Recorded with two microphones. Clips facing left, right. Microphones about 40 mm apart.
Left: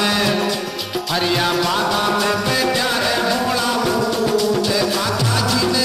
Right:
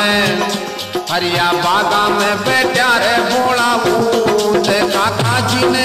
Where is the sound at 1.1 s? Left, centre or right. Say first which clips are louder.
Right 4 dB; right.